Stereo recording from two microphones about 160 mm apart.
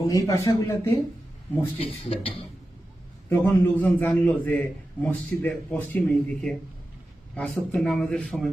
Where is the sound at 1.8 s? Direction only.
35° left (ahead or behind).